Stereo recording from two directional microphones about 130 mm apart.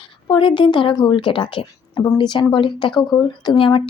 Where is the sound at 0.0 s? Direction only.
40° left (ahead or behind).